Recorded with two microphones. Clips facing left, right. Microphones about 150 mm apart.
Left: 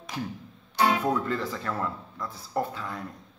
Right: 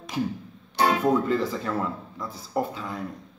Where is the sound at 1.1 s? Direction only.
10° right (ahead or behind).